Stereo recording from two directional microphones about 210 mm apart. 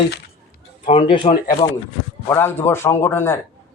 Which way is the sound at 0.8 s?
30° left (ahead or behind).